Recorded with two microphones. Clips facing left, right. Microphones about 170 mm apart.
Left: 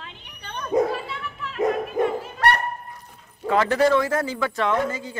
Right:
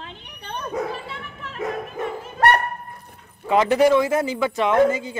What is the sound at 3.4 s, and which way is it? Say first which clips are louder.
Speech: right 3 dB; 15° right (ahead or behind).